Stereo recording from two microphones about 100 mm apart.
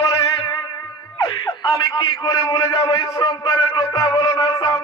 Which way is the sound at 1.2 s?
40° left (ahead or behind).